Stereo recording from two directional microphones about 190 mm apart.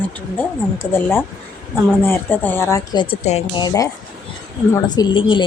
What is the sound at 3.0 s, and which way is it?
Speech, 35° left (ahead or behind).